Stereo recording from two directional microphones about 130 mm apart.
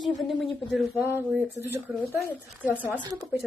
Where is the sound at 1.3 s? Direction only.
20° right (ahead or behind).